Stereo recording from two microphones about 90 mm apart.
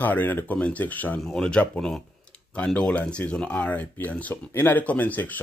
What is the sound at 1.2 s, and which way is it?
Speech, 5° left (ahead or behind).